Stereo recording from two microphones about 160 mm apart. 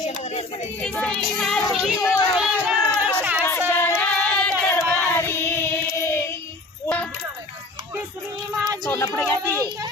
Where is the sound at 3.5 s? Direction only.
15° left (ahead or behind).